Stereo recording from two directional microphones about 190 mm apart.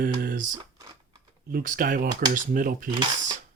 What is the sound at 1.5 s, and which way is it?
Speech, 45° right (ahead or behind).